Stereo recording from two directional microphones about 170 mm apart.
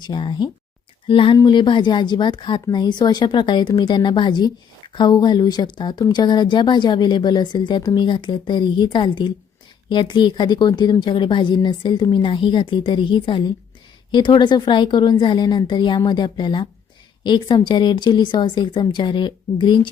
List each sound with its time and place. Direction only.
0.0 s speech: 25° left (ahead or behind)